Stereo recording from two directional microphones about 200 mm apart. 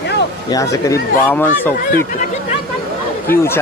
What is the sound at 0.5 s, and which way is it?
Speech, 15° left (ahead or behind).